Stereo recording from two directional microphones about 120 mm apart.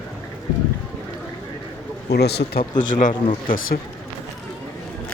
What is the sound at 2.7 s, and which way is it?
Speech, 90° left.